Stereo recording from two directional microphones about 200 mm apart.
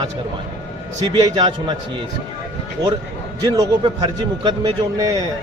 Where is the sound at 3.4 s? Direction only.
20° right (ahead or behind).